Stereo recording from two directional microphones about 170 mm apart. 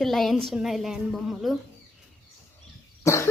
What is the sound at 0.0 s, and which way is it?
A woman's voice, centre (ahead or behind).